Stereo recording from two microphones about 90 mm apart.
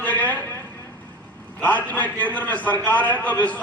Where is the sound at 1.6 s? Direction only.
15° left (ahead or behind).